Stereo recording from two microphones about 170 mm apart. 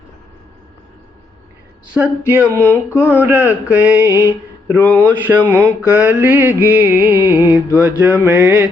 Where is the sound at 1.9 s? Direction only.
10° right (ahead or behind).